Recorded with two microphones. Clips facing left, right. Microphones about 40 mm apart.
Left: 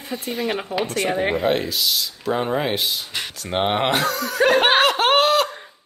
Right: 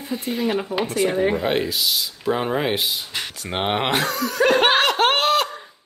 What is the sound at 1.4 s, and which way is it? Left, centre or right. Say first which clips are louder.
Speech: left 1 dB; centre.